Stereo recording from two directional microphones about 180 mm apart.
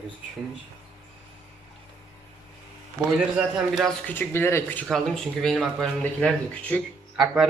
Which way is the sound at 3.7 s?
Centre (ahead or behind).